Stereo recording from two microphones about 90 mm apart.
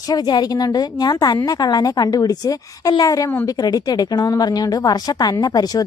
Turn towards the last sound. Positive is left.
turn(degrees=50)  # may be behind; listen again after turning